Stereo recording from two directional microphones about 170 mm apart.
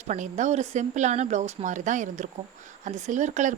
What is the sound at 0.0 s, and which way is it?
Speech, 45° right (ahead or behind).